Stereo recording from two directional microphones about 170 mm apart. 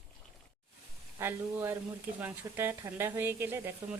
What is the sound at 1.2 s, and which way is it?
Speech, 15° right (ahead or behind).